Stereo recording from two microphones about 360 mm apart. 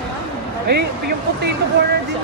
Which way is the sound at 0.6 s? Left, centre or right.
Right.